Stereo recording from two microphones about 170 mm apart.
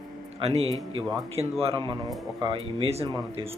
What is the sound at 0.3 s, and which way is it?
A man's voice, 35° right (ahead or behind).